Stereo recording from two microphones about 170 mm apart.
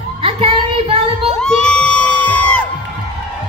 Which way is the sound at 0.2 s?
35° right (ahead or behind).